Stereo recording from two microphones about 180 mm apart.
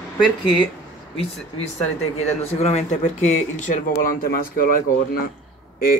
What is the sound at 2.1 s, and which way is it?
Speech, 35° left (ahead or behind).